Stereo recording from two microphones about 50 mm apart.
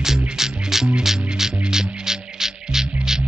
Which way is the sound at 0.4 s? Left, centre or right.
Centre.